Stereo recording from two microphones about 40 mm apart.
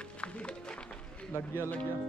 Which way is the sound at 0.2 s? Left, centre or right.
Left.